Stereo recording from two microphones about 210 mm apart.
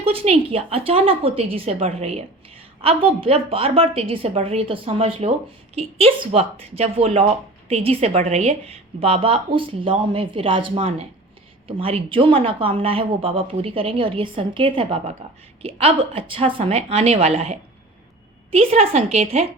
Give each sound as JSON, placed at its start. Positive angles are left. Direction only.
{"t": 0.0, "sound": "speech", "side_deg": -25}